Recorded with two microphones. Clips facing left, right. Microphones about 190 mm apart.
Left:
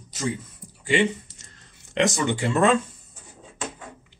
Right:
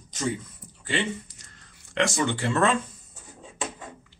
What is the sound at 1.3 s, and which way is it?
Whispering, 25° left (ahead or behind).